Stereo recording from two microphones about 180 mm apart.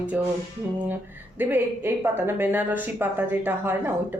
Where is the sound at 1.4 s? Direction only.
10° right (ahead or behind).